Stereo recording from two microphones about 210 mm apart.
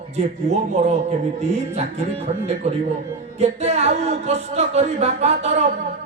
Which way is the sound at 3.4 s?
30° right (ahead or behind).